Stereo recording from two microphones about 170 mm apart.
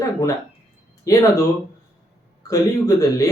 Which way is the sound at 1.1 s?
20° left (ahead or behind).